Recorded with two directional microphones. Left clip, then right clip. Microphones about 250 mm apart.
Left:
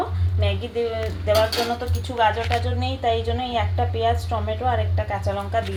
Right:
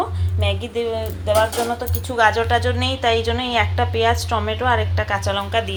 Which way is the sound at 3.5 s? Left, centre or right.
Centre.